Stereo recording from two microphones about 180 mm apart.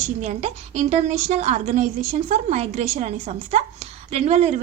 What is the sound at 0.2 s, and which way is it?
A woman's voice, 40° right (ahead or behind).